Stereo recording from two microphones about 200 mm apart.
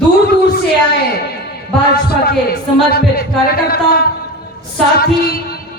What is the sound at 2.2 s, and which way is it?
Speech, 50° left (ahead or behind).